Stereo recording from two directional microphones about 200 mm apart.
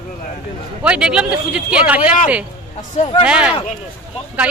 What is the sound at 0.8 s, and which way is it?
A man's voice, 5° right (ahead or behind).